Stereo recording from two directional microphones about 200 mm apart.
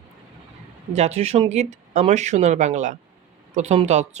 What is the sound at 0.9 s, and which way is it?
Speech, 35° right (ahead or behind).